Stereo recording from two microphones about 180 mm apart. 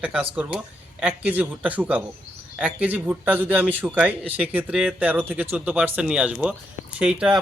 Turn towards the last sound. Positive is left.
turn(degrees=-5)  # may be behind; listen again after turning